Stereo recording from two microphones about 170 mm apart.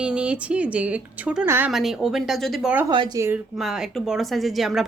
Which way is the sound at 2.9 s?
25° right (ahead or behind).